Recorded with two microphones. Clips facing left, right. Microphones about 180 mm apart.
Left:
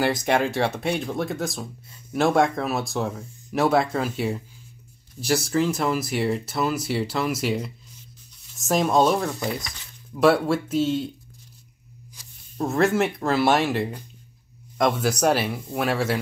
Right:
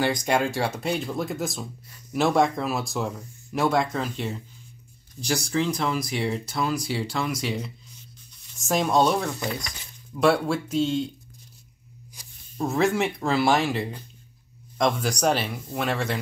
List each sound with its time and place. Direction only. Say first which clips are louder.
0.0 s speech: left 2 dB; 5° left (ahead or behind)
12.2 s a sound: even; 15° right (ahead or behind)
12.5 s speech: left 2 dB; centre (ahead or behind)